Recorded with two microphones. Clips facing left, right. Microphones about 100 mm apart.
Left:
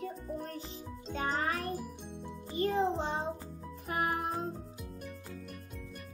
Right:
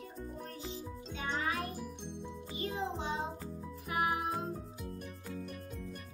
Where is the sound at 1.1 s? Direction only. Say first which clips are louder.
Left 3 dB; 45° left (ahead or behind).